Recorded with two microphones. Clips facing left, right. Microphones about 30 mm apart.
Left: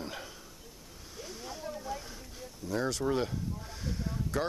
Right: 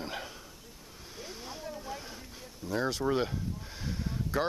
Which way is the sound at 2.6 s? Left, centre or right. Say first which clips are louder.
Right 1 dB; centre.